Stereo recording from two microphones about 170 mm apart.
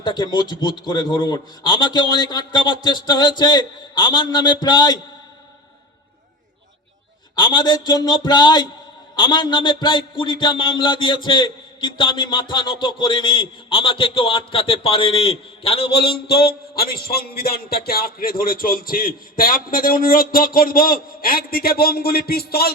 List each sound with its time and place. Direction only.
0.0 s a man's voice: 25° left (ahead or behind)
7.3 s a man's voice: 25° left (ahead or behind)
15.9 s a man's voice: 65° left (ahead or behind)